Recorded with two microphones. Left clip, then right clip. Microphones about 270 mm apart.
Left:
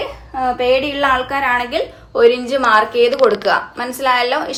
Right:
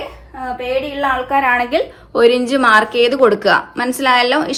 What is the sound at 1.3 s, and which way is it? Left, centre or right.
A woman's voice, centre.